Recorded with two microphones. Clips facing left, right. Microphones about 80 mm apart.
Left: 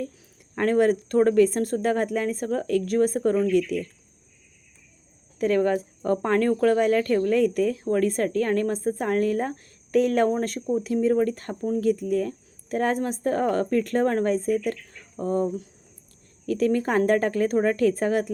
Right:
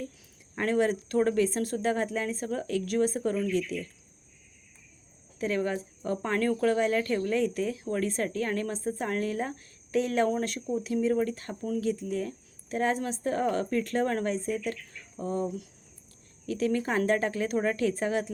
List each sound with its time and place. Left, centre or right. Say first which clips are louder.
0.5 s speech: left 6 dB; left
5.4 s speech: left 8 dB; left
10.2 s speech: left 5 dB; left